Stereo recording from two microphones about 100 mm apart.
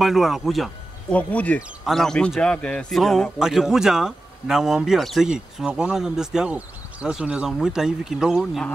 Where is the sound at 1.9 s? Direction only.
5° left (ahead or behind).